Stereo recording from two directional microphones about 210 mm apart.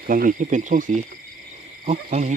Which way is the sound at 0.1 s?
40° right (ahead or behind).